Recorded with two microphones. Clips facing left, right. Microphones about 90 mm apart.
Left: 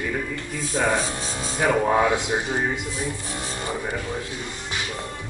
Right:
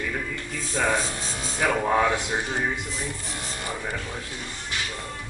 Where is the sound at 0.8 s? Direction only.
25° left (ahead or behind).